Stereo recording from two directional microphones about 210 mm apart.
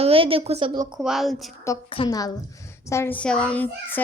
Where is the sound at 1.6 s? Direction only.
20° left (ahead or behind).